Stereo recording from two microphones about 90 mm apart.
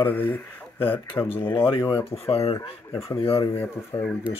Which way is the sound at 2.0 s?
90° left.